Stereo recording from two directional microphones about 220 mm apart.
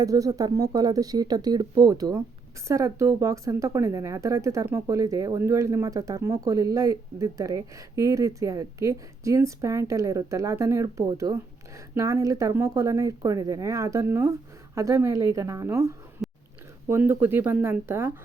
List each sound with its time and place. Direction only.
0.0 s speech: 15° right (ahead or behind)
16.2 s a sound: centre (ahead or behind)
16.9 s speech: 10° right (ahead or behind)